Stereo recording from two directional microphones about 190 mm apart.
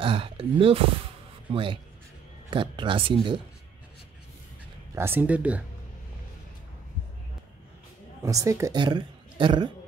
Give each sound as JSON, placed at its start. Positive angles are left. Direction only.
{"t": 0.0, "sound": "speech", "side_deg": -30}
{"t": 4.9, "sound": "speech", "side_deg": -10}
{"t": 8.2, "sound": "a woman's voice", "side_deg": -15}